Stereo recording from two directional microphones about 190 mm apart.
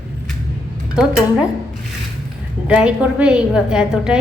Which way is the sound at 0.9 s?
5° right (ahead or behind).